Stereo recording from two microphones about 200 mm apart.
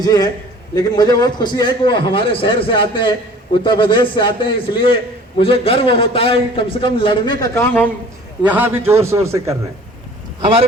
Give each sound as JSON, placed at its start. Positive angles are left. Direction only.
{"t": 0.0, "sound": "a man's voice", "side_deg": 20}
{"t": 8.4, "sound": "a man's voice", "side_deg": -10}